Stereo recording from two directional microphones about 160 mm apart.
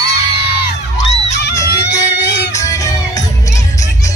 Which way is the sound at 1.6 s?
90° left.